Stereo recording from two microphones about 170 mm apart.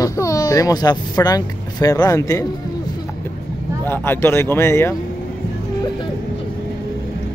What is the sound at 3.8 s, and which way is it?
Speech, 10° left (ahead or behind).